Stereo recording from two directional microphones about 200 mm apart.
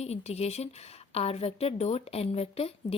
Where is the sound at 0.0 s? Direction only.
30° left (ahead or behind).